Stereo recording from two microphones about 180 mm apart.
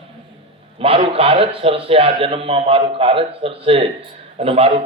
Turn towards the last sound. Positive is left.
turn(degrees=-35)  # may be behind; listen again after turning